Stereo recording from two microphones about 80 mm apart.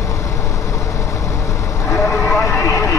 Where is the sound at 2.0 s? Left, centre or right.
Left.